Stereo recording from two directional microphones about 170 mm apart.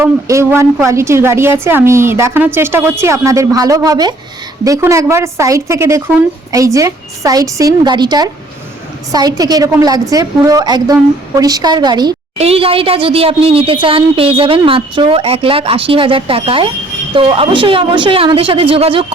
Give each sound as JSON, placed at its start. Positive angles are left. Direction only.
{"t": 0.0, "sound": "a woman's voice", "side_deg": -15}
{"t": 12.4, "sound": "speech", "side_deg": -35}